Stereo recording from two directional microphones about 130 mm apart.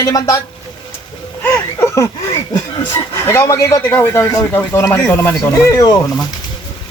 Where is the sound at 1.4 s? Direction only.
20° left (ahead or behind).